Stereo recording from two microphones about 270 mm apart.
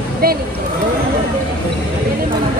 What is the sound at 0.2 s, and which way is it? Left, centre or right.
Speech, right.